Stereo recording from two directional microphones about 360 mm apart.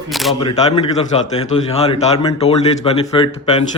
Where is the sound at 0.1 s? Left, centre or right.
Centre.